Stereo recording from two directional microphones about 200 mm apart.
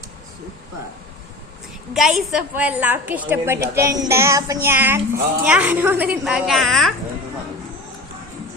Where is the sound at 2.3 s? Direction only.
5° right (ahead or behind).